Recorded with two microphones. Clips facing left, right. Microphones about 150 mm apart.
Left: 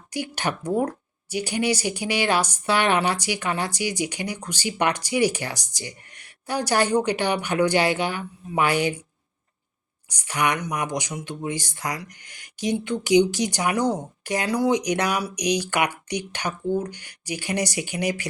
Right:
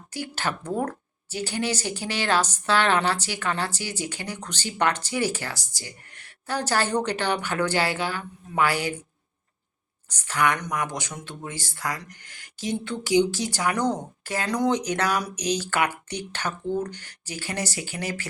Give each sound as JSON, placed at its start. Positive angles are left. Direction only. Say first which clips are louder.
{"t": 0.1, "sound": "speech", "louder": "left 3 dB", "side_deg": 15}
{"t": 10.1, "sound": "speech", "louder": "even", "side_deg": 15}